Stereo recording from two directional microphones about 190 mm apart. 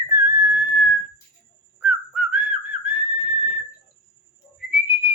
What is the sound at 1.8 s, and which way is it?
Whistling, 5° right (ahead or behind).